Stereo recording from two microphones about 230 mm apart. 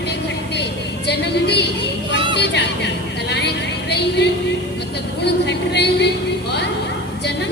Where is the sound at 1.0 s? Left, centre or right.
Left.